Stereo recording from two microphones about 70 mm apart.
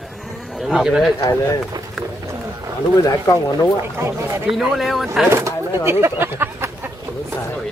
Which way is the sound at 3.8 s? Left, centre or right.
Right.